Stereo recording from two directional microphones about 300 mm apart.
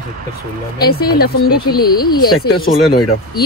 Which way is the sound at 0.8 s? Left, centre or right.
Left.